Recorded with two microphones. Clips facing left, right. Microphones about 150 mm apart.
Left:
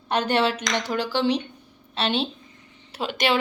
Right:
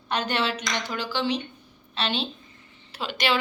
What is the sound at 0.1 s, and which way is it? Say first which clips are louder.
A woman's voice: left 5 dB; 55° left (ahead or behind).